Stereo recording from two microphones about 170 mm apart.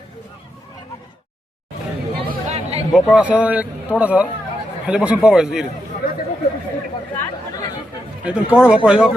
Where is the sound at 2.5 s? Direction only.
35° right (ahead or behind).